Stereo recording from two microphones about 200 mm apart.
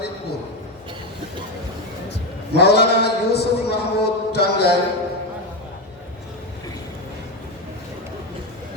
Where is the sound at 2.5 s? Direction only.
55° left (ahead or behind).